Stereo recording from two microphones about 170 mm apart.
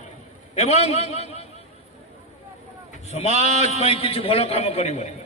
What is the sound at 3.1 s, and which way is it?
A man's voice, 40° left (ahead or behind).